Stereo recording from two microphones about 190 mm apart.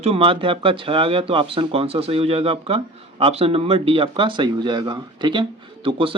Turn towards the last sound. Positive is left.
turn(degrees=-25)  # may be behind; listen again after turning